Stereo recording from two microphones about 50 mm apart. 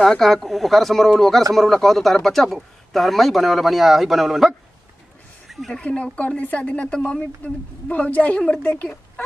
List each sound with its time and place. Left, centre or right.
0.2 s a man's voice: centre
5.5 s a sound: centre
6.1 s a woman's voice: left